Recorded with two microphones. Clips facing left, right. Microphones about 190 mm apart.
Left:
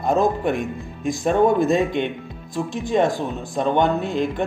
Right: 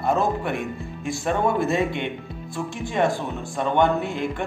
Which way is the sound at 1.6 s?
20° left (ahead or behind).